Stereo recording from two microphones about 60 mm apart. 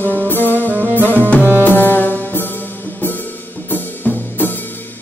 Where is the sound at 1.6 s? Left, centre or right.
Left.